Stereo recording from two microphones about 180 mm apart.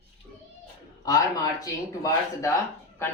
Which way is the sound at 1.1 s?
20° left (ahead or behind).